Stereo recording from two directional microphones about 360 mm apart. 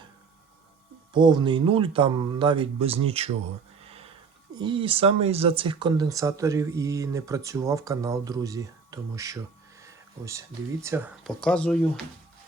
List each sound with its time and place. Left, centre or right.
1.1 s speech: centre
3.8 s a sound: centre
4.5 s speech: centre